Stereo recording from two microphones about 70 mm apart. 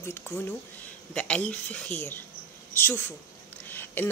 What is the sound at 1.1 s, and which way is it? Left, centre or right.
Speech, centre.